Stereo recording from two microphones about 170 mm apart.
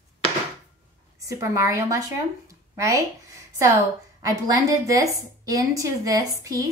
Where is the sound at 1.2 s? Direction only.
20° right (ahead or behind).